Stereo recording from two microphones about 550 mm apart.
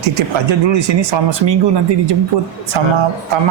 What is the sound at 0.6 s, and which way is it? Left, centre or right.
Speech, right.